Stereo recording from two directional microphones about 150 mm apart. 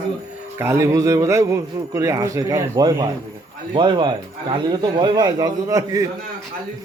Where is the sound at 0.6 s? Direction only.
20° right (ahead or behind).